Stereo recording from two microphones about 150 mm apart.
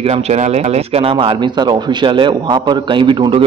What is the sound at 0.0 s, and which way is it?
Speech, 45° right (ahead or behind).